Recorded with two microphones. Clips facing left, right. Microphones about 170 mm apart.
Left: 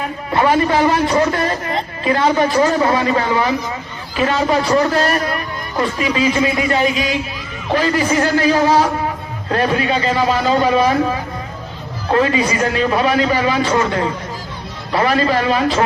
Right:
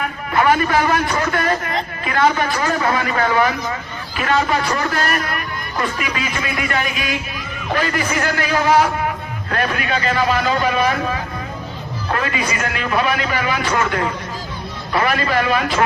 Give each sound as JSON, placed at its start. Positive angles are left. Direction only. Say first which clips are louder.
{"t": 0.0, "sound": "a man's voice", "louder": "left 1 dB", "side_deg": 30}